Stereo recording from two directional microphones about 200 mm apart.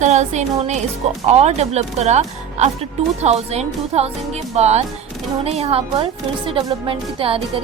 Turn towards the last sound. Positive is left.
turn(degrees=-25)  # may be behind; listen again after turning